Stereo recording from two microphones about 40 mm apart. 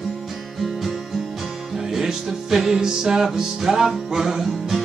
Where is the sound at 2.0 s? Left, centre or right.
Centre.